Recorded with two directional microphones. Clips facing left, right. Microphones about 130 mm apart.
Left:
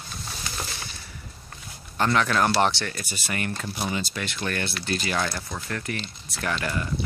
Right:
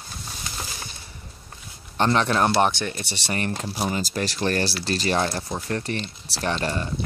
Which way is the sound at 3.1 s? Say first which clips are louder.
Right 3 dB; 30° right (ahead or behind).